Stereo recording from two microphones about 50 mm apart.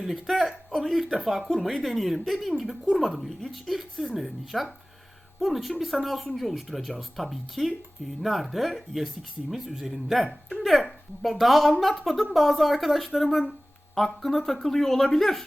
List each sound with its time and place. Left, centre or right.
0.0 s speech: centre